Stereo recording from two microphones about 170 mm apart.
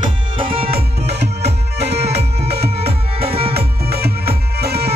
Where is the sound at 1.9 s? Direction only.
40° right (ahead or behind).